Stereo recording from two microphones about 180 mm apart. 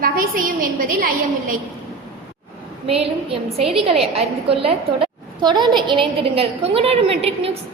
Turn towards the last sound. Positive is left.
turn(degrees=-35)  # may be behind; listen again after turning